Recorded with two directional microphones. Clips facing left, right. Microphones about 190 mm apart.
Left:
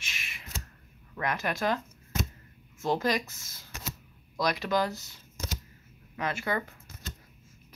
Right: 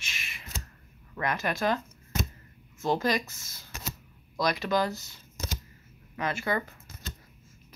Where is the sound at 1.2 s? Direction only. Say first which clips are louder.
Right 1 dB; 5° left (ahead or behind).